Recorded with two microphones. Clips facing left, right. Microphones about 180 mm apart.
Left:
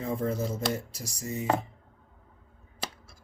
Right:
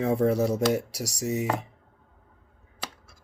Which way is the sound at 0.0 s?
75° right (ahead or behind).